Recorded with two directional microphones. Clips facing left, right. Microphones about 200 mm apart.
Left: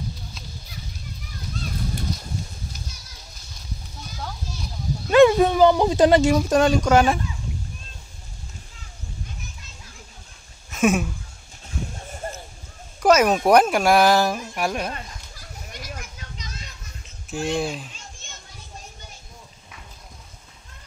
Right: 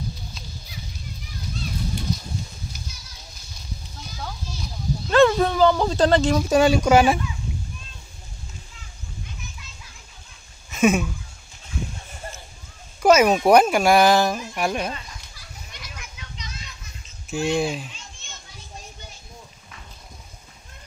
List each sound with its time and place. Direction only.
5.1 s bow-wow: 10° left (ahead or behind)
6.5 s speech: 5° right (ahead or behind)
10.7 s a sound: centre (ahead or behind)
13.0 s speech: centre (ahead or behind)
14.9 s children playing: 50° left (ahead or behind)
17.3 s speech: centre (ahead or behind)